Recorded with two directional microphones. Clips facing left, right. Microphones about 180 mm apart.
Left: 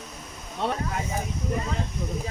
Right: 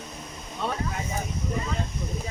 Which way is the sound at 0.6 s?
70° left (ahead or behind).